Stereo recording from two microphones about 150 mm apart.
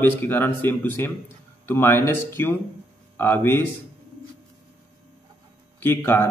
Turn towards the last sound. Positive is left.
turn(degrees=15)  # may be behind; listen again after turning